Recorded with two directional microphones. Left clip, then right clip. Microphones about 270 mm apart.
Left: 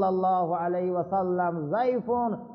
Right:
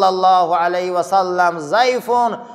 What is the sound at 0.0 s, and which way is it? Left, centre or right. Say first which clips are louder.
A man's voice: right 12 dB; centre.